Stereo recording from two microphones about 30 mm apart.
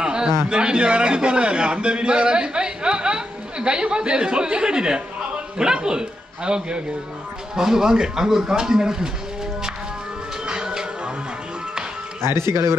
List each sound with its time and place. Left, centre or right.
0.0 s a man's voice: right
7.5 s speech: centre
10.4 s music: right